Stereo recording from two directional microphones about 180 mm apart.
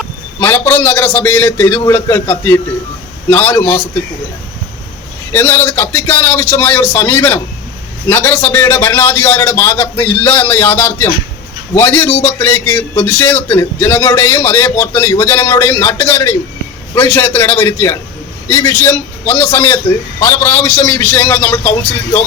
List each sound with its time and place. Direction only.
0.3 s a man's voice: 15° left (ahead or behind)
5.3 s a man's voice: 15° left (ahead or behind)